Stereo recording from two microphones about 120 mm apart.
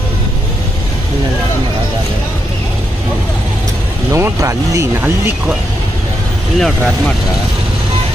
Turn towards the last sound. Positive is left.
turn(degrees=10)  # may be behind; listen again after turning